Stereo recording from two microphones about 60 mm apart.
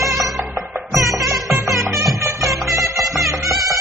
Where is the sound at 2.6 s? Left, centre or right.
Right.